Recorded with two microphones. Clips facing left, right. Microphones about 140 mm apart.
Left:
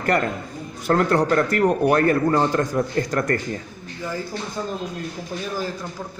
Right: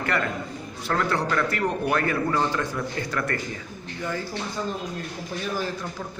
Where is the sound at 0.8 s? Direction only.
45° left (ahead or behind).